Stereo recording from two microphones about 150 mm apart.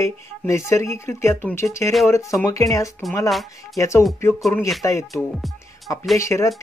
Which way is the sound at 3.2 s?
Centre (ahead or behind).